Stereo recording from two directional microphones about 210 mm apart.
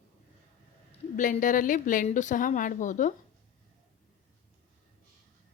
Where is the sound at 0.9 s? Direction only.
35° left (ahead or behind).